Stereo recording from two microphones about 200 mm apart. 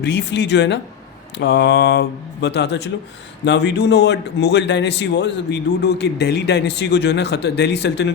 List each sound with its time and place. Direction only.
0.0 s a man's voice: 60° left (ahead or behind)